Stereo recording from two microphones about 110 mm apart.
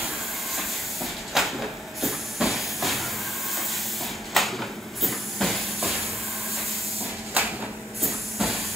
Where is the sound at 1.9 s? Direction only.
Centre (ahead or behind).